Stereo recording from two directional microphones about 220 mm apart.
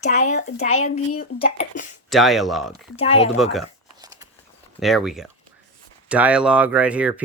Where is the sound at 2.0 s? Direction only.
Centre (ahead or behind).